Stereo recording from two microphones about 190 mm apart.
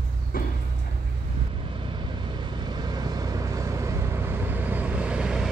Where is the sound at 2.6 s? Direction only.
20° right (ahead or behind).